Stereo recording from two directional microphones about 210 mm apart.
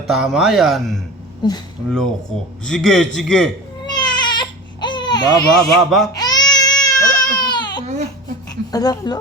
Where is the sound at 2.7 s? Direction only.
Centre (ahead or behind).